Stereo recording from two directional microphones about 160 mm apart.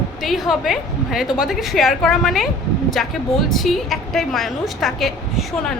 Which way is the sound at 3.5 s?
Centre (ahead or behind).